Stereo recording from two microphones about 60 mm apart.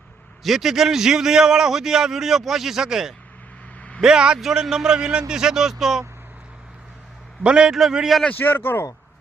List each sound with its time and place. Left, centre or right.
0.4 s a man's voice: centre
3.8 s vehicle: left
4.0 s a man's voice: centre
7.4 s a man's voice: centre
7.7 s a man's voice: centre
8.3 s speech: left